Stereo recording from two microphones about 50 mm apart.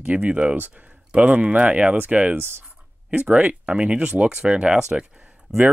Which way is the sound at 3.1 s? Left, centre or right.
Right.